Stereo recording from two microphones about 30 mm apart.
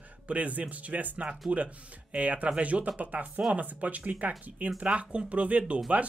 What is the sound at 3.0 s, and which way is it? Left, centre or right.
Speech, right.